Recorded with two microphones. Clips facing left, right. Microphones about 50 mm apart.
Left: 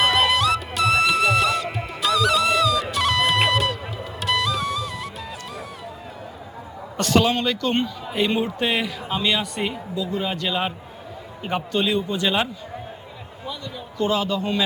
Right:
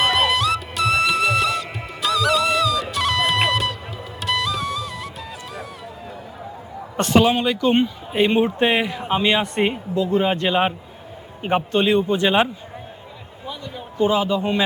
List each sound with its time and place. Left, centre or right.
0.0 s music: centre
6.9 s a sound: right
7.2 s speech: centre
8.1 s a man's voice: right
14.0 s speech: centre